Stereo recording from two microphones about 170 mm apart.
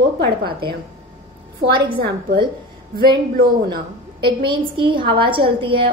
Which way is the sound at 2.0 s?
30° right (ahead or behind).